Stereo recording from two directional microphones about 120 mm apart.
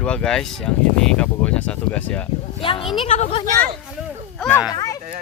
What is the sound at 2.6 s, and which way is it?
Speech, 50° left (ahead or behind).